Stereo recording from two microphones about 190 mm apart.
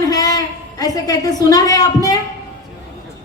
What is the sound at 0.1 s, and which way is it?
A woman's voice, 20° left (ahead or behind).